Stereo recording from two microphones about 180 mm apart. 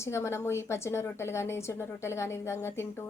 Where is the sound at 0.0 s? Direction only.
15° left (ahead or behind).